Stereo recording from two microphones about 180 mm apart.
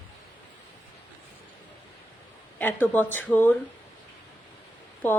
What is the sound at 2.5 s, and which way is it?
Speech, 10° left (ahead or behind).